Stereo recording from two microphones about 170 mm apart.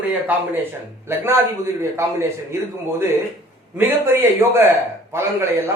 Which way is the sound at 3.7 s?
15° right (ahead or behind).